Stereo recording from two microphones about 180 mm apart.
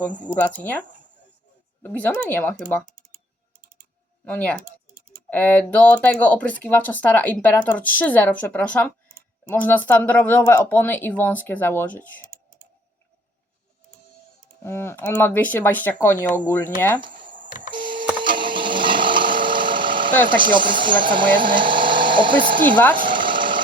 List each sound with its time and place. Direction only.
0.3 s speech: 10° left (ahead or behind)
4.3 s speech: 5° left (ahead or behind)
14.6 s speech: 15° left (ahead or behind)
17.2 s telephone dialing: 45° right (ahead or behind)
17.7 s a sound: 25° right (ahead or behind)
20.5 s speech: 25° right (ahead or behind)
23.0 s engine: 25° right (ahead or behind)